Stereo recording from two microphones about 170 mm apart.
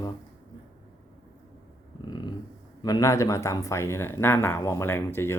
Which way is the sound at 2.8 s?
20° left (ahead or behind).